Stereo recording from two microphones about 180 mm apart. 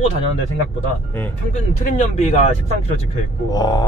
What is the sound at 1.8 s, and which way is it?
Speech, 45° left (ahead or behind).